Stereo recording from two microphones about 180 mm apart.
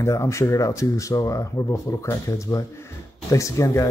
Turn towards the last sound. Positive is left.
turn(degrees=15)  # may be behind; listen again after turning